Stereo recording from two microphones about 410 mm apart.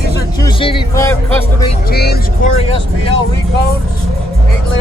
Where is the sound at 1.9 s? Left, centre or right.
Left.